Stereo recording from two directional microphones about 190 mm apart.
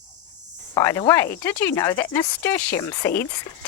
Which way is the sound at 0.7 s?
15° left (ahead or behind).